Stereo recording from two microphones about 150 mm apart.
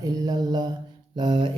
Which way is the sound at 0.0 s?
25° right (ahead or behind).